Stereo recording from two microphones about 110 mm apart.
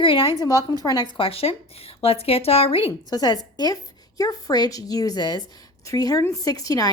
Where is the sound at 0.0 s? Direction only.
55° left (ahead or behind).